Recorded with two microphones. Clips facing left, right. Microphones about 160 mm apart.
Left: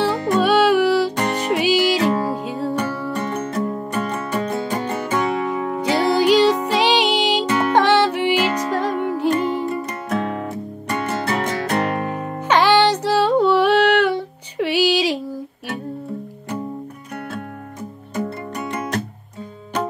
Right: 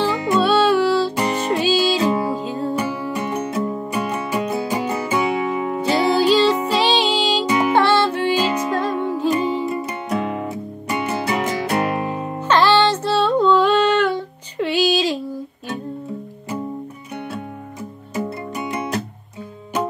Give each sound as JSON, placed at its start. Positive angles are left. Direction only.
{"t": 0.4, "sound": "music", "side_deg": 10}
{"t": 1.1, "sound": "music", "side_deg": -10}
{"t": 1.4, "sound": "music", "side_deg": 15}
{"t": 2.7, "sound": "music", "side_deg": -10}
{"t": 5.8, "sound": "music", "side_deg": 15}
{"t": 7.4, "sound": "music", "side_deg": -10}
{"t": 7.7, "sound": "music", "side_deg": 15}
{"t": 8.4, "sound": "music", "side_deg": -15}
{"t": 8.7, "sound": "music", "side_deg": 15}
{"t": 9.3, "sound": "music", "side_deg": -10}
{"t": 12.4, "sound": "music", "side_deg": 10}
{"t": 18.1, "sound": "music", "side_deg": -10}